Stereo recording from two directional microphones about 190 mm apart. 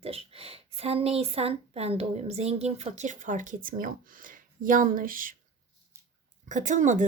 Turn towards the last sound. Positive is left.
turn(degrees=-40)  # may be behind; listen again after turning